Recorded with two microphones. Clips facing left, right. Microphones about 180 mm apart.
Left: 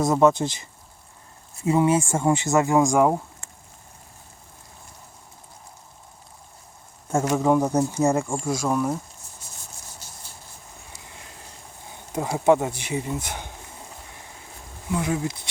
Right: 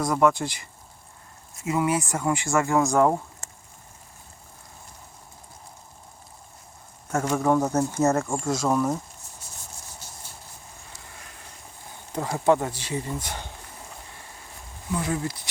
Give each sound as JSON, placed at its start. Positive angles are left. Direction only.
{"t": 0.0, "sound": "speech", "side_deg": 25}
{"t": 3.4, "sound": "a sound", "side_deg": -40}
{"t": 7.3, "sound": "speech", "side_deg": 15}
{"t": 11.1, "sound": "a sound", "side_deg": 25}
{"t": 12.1, "sound": "speech", "side_deg": 15}
{"t": 14.9, "sound": "speech", "side_deg": 15}